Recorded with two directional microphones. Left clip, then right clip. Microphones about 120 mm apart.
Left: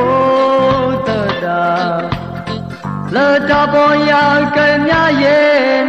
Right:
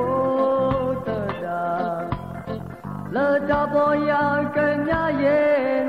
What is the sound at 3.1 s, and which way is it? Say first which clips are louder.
Music: left 9 dB; 35° left (ahead or behind).